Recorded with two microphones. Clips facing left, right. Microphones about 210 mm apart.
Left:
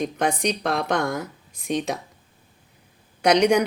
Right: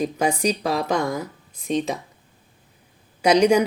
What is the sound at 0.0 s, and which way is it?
A woman's voice, 10° right (ahead or behind).